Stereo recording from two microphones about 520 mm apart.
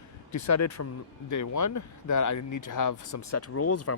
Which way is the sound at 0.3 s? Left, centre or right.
Left.